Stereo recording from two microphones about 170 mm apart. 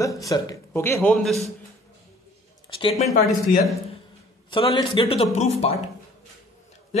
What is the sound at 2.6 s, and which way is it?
Speech, 30° left (ahead or behind).